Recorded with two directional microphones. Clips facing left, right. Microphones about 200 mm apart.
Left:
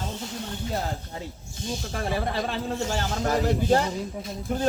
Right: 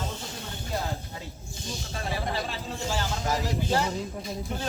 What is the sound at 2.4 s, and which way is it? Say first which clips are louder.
Speech: left 5 dB; 50° left (ahead or behind).